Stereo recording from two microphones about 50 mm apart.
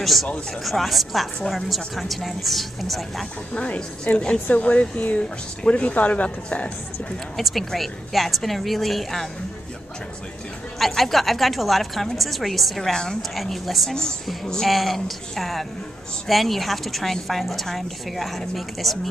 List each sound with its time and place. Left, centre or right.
0.0 s a woman's voice: centre
3.5 s speech: left
7.3 s a woman's voice: centre
11.0 s a woman's voice: centre
12.9 s a woman's voice: centre
13.3 s a woman's voice: centre
13.8 s a woman's voice: centre